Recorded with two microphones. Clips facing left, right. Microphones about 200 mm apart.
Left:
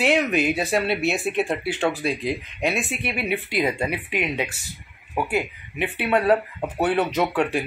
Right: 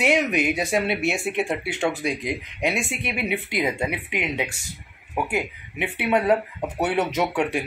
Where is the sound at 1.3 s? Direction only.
20° right (ahead or behind).